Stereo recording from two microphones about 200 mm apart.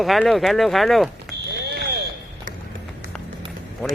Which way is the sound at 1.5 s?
55° right (ahead or behind).